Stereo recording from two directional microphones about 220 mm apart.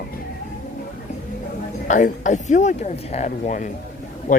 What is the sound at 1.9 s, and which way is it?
Speech, 35° left (ahead or behind).